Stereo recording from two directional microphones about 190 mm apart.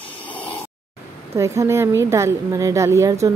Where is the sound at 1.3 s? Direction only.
15° right (ahead or behind).